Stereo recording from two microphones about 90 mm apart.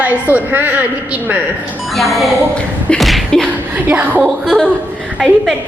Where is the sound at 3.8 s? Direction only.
15° right (ahead or behind).